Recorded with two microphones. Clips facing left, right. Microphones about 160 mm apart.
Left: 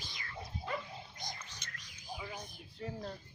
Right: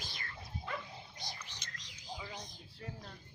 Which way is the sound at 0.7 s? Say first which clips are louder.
Left 3 dB; 35° left (ahead or behind).